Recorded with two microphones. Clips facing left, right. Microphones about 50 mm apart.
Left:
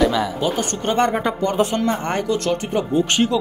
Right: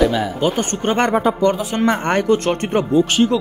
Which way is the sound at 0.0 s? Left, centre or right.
Centre.